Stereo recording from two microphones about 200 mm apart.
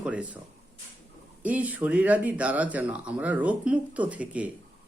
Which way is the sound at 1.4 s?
5° right (ahead or behind).